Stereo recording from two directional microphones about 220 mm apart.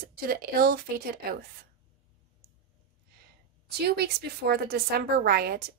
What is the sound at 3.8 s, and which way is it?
A woman's voice, 45° right (ahead or behind).